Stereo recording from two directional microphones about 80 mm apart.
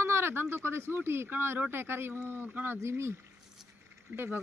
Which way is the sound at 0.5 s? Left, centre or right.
Right.